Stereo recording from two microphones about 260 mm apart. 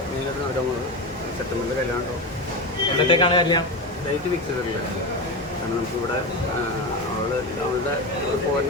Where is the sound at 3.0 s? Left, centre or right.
Centre.